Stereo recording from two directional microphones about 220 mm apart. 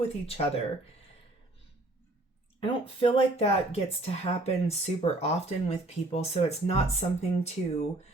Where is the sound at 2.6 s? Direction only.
25° left (ahead or behind).